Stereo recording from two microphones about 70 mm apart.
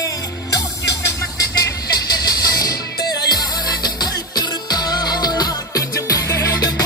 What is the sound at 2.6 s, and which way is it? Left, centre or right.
Music, left.